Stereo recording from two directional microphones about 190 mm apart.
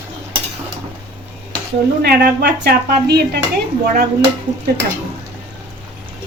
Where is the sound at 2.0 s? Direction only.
55° right (ahead or behind).